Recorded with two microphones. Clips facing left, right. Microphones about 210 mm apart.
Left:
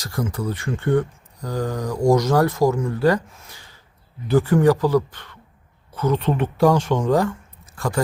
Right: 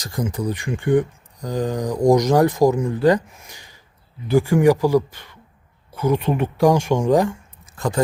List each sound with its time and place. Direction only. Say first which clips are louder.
0.0 s speech: right 1 dB; 20° right (ahead or behind)